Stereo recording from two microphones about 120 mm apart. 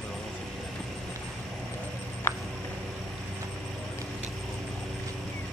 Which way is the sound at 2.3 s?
20° left (ahead or behind).